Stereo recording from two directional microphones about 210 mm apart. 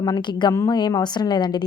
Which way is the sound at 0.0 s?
20° left (ahead or behind).